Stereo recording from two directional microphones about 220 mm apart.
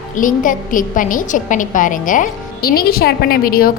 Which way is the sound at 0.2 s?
35° left (ahead or behind).